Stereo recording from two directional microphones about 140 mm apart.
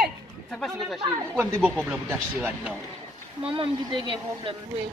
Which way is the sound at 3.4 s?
40° right (ahead or behind).